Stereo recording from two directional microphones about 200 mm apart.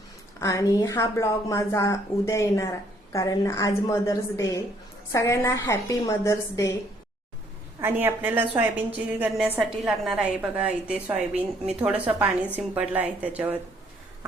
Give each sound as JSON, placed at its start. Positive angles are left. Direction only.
{"t": 0.3, "sound": "a woman's voice", "side_deg": 15}
{"t": 7.8, "sound": "a woman's voice", "side_deg": -10}